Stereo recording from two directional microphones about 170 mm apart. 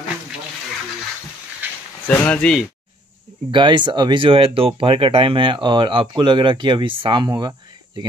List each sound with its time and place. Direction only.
2.0 s speech: 5° left (ahead or behind)
3.5 s speech: 25° right (ahead or behind)